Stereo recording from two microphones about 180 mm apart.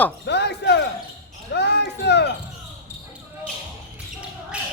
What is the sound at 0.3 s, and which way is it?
Basketball bounce, 70° left (ahead or behind).